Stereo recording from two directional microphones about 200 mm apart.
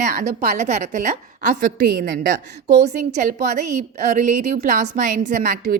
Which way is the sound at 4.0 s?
40° right (ahead or behind).